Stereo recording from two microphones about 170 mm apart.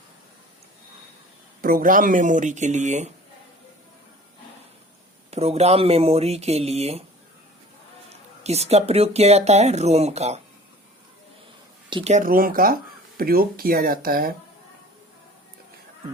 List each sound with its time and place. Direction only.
1.6 s speech: 55° right (ahead or behind)
5.3 s speech: 40° right (ahead or behind)
8.4 s speech: 40° right (ahead or behind)
11.9 s speech: 30° right (ahead or behind)
12.1 s speech: 55° right (ahead or behind)